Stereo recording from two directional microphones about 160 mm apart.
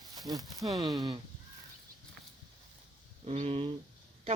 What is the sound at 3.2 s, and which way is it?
Speech, 40° right (ahead or behind).